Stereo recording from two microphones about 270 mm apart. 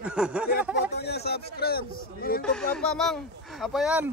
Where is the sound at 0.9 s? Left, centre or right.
Left.